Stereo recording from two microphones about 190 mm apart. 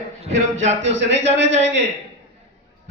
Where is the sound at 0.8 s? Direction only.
70° right (ahead or behind).